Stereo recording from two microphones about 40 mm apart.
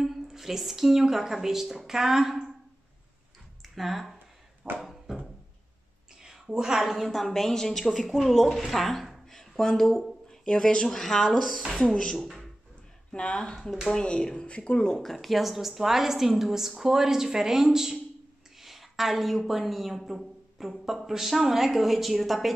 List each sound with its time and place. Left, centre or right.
0.0 s a woman's voice: centre
3.6 s a sound: centre
4.6 s a sound: right
6.2 s a woman's voice: centre
10.4 s a woman's voice: left; by 11.7 s centre
11.7 s speech: left
12.2 s speech: centre
13.1 s speech: left
15.0 s a woman's voice: centre